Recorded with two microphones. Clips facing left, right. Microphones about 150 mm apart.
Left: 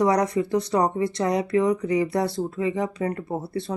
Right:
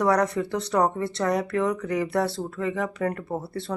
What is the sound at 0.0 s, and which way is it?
Speech, 15° left (ahead or behind).